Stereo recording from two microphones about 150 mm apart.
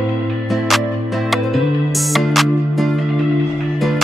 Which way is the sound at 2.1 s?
Centre (ahead or behind).